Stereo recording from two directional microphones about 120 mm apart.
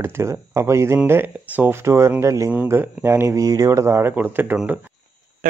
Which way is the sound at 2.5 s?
15° right (ahead or behind).